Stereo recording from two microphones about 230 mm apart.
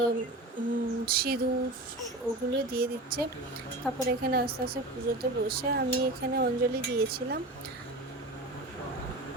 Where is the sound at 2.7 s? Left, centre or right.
Right.